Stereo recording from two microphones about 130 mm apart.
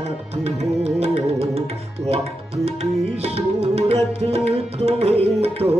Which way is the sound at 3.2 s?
50° right (ahead or behind).